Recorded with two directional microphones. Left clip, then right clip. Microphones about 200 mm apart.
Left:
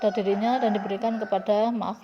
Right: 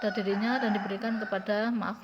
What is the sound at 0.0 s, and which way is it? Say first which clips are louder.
Speech: left 6 dB; 15° left (ahead or behind).